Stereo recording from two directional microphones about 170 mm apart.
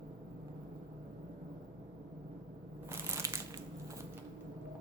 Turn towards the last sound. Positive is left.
turn(degrees=-15)  # may be behind; listen again after turning